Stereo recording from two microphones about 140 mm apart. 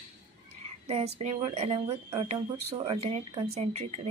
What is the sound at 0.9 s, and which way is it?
A woman's voice, 50° right (ahead or behind).